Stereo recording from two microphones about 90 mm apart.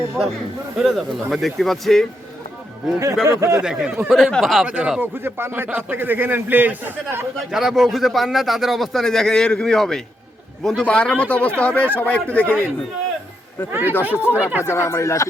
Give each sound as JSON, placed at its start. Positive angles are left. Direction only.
{"t": 0.8, "sound": "a man's voice", "side_deg": 0}
{"t": 3.2, "sound": "speech", "side_deg": -35}
{"t": 3.6, "sound": "speech", "side_deg": -5}
{"t": 4.1, "sound": "a man's voice", "side_deg": 5}
{"t": 4.6, "sound": "speech", "side_deg": -10}
{"t": 4.9, "sound": "a man's voice", "side_deg": -25}
{"t": 7.3, "sound": "a man's voice", "side_deg": -5}
{"t": 13.7, "sound": "a man's voice", "side_deg": -25}
{"t": 14.6, "sound": "speech", "side_deg": 30}